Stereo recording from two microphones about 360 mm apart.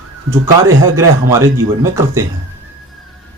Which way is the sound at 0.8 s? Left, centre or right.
Centre.